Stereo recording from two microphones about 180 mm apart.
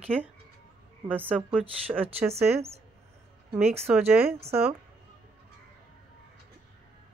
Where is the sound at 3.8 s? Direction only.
10° right (ahead or behind).